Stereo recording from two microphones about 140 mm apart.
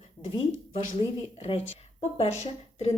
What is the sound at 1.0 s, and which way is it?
Speech, 40° left (ahead or behind).